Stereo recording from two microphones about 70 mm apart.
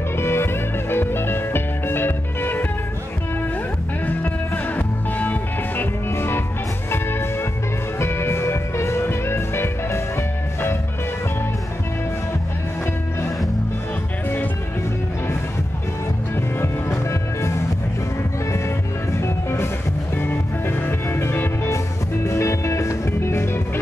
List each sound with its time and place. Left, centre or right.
0.2 s music: left
4.7 s music: left
6.0 s music: left
16.3 s music: left
19.1 s music: left
22.2 s music: left